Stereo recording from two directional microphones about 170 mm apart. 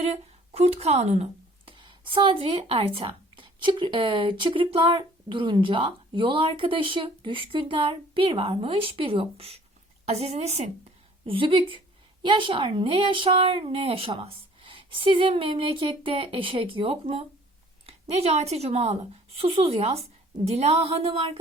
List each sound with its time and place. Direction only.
0.0 s speech: 35° right (ahead or behind)
1.7 s speech: 30° right (ahead or behind)